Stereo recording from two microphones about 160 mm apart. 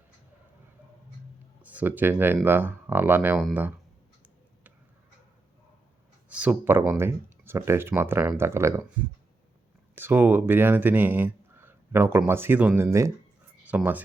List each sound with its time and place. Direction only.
1.6 s speech: 10° right (ahead or behind)
6.2 s speech: 10° right (ahead or behind)
9.9 s speech: 10° right (ahead or behind)